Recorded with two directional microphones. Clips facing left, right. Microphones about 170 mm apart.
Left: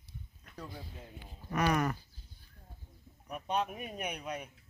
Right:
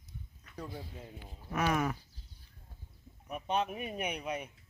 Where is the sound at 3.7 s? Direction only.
5° right (ahead or behind).